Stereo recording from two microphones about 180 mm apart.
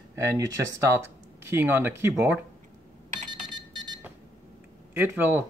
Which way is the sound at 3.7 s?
25° right (ahead or behind).